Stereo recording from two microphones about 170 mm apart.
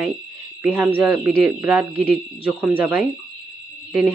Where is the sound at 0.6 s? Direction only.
10° right (ahead or behind).